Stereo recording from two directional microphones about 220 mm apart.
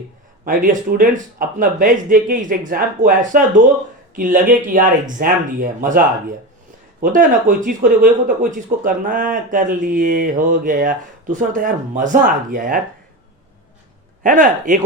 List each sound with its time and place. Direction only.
0.4 s speech: 40° right (ahead or behind)
14.3 s speech: 35° right (ahead or behind)